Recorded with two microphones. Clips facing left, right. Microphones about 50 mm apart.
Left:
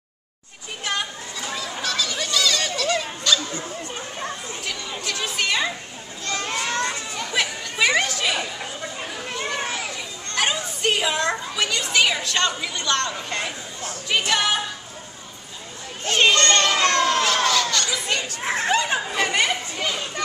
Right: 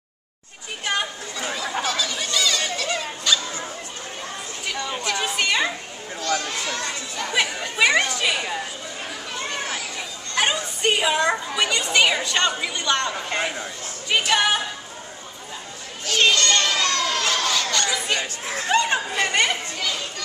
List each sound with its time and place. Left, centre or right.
1.5 s a sound: centre
5.0 s chatter: centre
6.4 s a sound: left
7.2 s chatter: centre
10.3 s children playing: centre
11.3 s a child's voice: centre
16.3 s a child's voice: left
16.7 s children playing: left
17.5 s chatter: centre
18.4 s speech: left
18.7 s chatter: centre
19.8 s a sound: left